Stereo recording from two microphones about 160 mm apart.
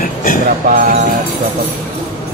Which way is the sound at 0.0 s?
60° left (ahead or behind).